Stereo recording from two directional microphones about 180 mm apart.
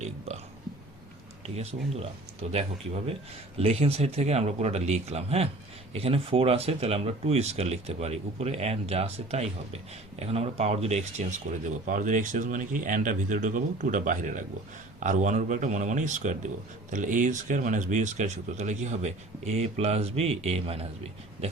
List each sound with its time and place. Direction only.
1.5 s speech: 35° right (ahead or behind)